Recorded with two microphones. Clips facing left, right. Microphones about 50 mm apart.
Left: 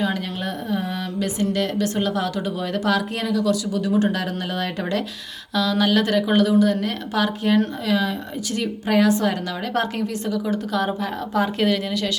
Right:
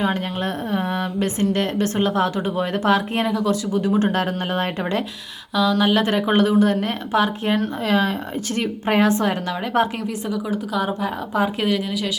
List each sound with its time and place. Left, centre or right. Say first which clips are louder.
0.7 s speech: right 2 dB; right
5.5 s speech: right 2 dB; centre; by 9.3 s right
9.7 s speech: right 3 dB; right